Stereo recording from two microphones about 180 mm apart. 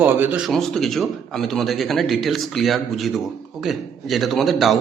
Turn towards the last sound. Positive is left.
turn(degrees=0)  # may be behind; listen again after turning